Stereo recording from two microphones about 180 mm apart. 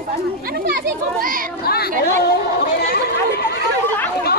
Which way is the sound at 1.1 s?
50° right (ahead or behind).